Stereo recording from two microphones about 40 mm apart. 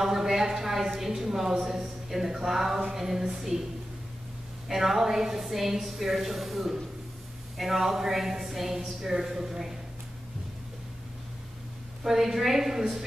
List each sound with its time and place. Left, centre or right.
0.0 s a woman's voice: centre
4.6 s a woman's voice: centre
12.0 s a woman's voice: centre